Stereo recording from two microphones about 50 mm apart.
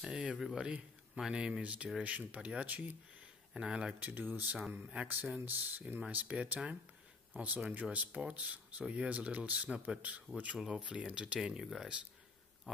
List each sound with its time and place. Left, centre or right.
0.1 s a man's voice: right
1.6 s speech: right
3.5 s speech: centre
4.0 s speech: right
4.6 s speech: centre
5.0 s speech: right
6.1 s speech: right
12.7 s pig: centre